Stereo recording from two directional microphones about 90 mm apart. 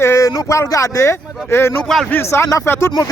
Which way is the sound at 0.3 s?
40° left (ahead or behind).